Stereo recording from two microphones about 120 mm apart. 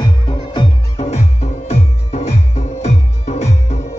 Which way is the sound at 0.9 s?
65° left (ahead or behind).